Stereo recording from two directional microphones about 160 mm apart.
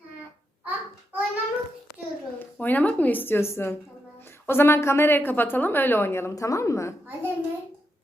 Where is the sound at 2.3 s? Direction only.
10° left (ahead or behind).